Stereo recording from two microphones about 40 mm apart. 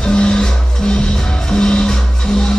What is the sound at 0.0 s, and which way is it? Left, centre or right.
Music, left.